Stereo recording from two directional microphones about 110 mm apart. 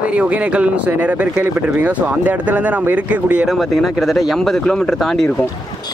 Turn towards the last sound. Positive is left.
turn(degrees=5)  # may be behind; listen again after turning